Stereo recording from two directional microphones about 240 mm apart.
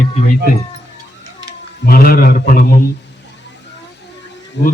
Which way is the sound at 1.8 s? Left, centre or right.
Left.